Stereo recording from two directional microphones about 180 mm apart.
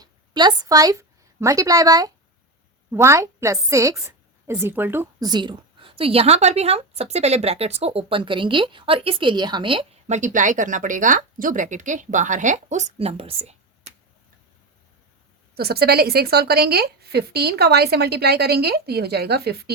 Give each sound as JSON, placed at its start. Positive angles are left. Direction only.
{"t": 0.0, "sound": "a woman's voice", "side_deg": -25}
{"t": 5.3, "sound": "speech", "side_deg": -25}
{"t": 15.5, "sound": "a woman's voice", "side_deg": -60}